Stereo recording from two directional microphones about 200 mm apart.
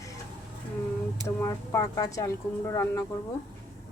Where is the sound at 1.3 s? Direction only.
15° left (ahead or behind).